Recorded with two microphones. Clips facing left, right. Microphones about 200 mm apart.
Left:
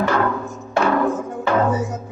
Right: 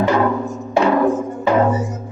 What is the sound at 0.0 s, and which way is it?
Music, 15° right (ahead or behind).